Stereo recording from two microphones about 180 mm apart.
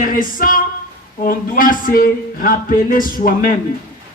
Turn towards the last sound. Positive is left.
turn(degrees=50)  # may be behind; listen again after turning